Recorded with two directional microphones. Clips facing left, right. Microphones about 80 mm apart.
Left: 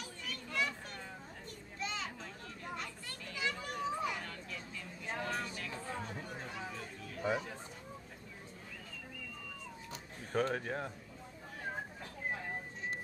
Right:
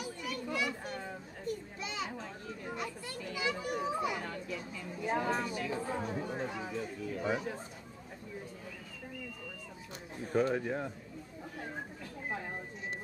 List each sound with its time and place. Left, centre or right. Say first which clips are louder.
0.0 s children playing: right 7 dB; centre
7.2 s chatter: right 1 dB; centre
10.3 s speech: right 4 dB; centre